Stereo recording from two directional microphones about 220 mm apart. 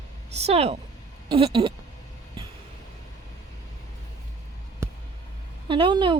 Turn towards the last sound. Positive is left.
turn(degrees=-20)  # may be behind; listen again after turning